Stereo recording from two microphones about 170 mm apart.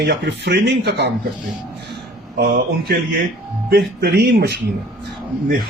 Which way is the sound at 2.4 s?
60° right (ahead or behind).